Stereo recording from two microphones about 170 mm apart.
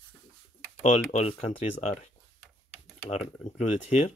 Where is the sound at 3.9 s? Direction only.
40° left (ahead or behind).